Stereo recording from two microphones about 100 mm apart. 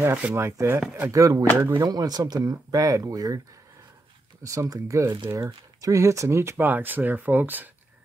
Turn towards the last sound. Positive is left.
turn(degrees=-20)  # may be behind; listen again after turning